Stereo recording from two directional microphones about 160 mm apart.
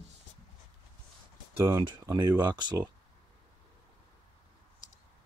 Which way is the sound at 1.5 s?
15° right (ahead or behind).